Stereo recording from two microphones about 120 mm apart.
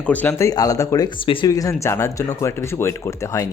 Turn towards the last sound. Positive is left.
turn(degrees=25)  # may be behind; listen again after turning